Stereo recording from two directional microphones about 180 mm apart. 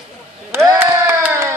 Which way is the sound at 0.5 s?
20° right (ahead or behind).